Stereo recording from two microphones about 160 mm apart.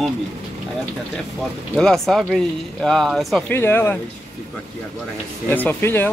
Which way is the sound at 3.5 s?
15° left (ahead or behind).